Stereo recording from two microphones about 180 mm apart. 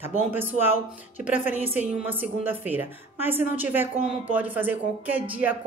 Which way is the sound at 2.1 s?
10° right (ahead or behind).